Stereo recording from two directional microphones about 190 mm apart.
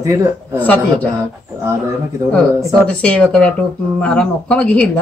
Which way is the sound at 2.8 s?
5° left (ahead or behind).